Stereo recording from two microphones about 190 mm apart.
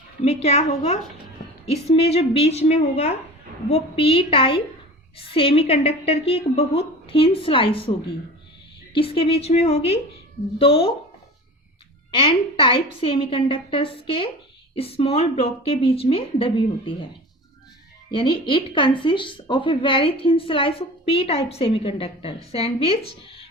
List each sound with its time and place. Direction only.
0.2 s a woman's voice: 35° left (ahead or behind)
12.1 s speech: 30° left (ahead or behind)
18.1 s speech: 25° left (ahead or behind)